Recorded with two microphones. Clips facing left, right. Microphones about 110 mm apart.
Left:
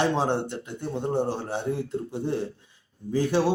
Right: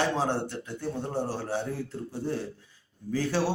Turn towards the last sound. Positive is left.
turn(degrees=20)  # may be behind; listen again after turning